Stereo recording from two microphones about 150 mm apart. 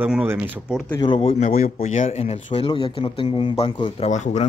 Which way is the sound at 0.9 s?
35° left (ahead or behind).